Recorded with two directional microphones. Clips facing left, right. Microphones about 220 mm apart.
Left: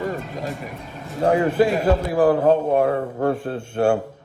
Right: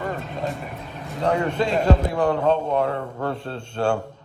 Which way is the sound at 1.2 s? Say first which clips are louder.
Left 4 dB; 25° left (ahead or behind).